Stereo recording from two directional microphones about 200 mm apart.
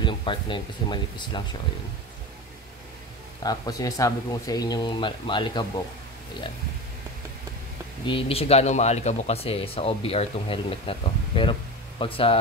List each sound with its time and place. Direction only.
0.0 s speech: 25° left (ahead or behind)
3.4 s speech: 20° left (ahead or behind)
8.1 s speech: 30° left (ahead or behind)